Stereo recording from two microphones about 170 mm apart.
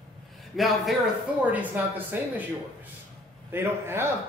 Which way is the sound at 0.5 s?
Centre (ahead or behind).